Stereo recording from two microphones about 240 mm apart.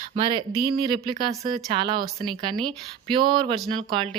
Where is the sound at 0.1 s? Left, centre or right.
Right.